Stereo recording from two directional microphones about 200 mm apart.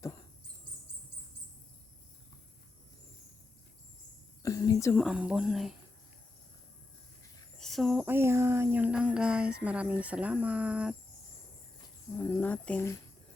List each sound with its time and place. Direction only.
4.4 s speech: 15° left (ahead or behind)
4.9 s speech: 5° right (ahead or behind)
7.6 s speech: centre (ahead or behind)
12.3 s speech: 10° left (ahead or behind)